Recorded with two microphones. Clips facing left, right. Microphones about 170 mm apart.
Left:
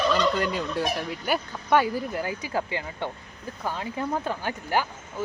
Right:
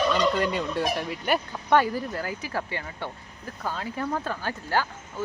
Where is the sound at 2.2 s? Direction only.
20° left (ahead or behind).